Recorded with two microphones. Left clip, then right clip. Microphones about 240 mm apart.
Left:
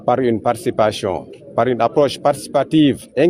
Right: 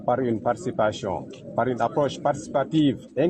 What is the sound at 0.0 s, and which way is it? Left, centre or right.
Speech, left.